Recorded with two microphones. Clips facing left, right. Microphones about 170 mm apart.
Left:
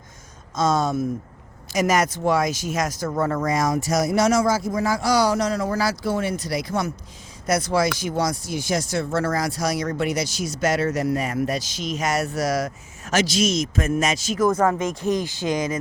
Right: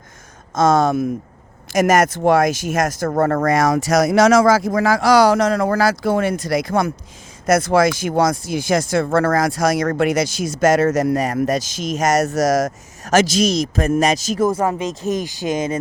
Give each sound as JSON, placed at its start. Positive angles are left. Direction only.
{"t": 0.5, "sound": "speech", "side_deg": -50}
{"t": 0.8, "sound": "speech", "side_deg": -90}
{"t": 1.7, "sound": "speech", "side_deg": -50}
{"t": 7.4, "sound": "speech", "side_deg": -50}
{"t": 14.4, "sound": "speech", "side_deg": -20}